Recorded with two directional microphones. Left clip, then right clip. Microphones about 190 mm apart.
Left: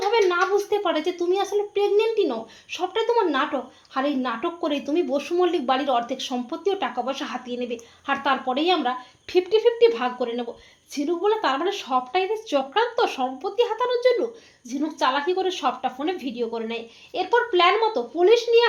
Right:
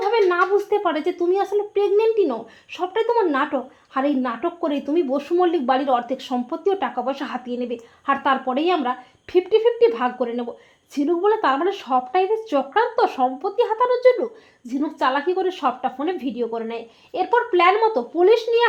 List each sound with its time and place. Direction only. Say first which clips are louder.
0.1 s speech: right 2 dB; 30° right (ahead or behind)